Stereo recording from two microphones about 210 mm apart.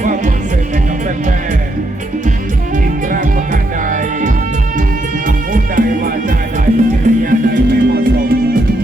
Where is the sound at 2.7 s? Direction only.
40° right (ahead or behind).